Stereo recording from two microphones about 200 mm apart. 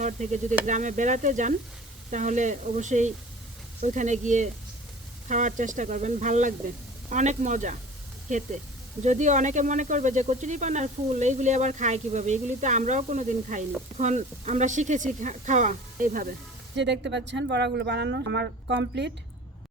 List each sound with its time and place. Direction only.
0.0 s speech: 40° right (ahead or behind)
16.7 s speech: 60° right (ahead or behind)